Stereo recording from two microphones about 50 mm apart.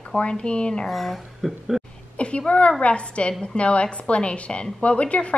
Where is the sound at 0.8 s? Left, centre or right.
Centre.